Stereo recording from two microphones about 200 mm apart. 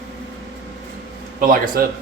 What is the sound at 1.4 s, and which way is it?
Speech, 45° right (ahead or behind).